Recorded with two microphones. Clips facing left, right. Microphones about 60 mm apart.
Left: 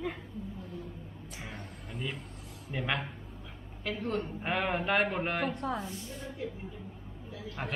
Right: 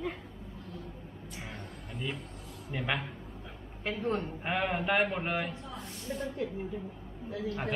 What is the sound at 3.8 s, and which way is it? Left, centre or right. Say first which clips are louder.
Speech: right 1 dB; right.